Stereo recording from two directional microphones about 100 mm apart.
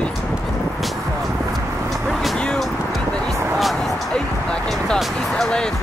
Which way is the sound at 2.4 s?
10° left (ahead or behind).